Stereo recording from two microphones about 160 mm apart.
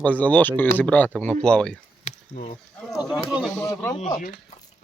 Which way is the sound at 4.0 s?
50° left (ahead or behind).